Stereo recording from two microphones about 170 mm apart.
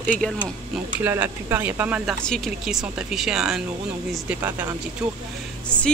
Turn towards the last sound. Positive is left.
turn(degrees=5)  # may be behind; listen again after turning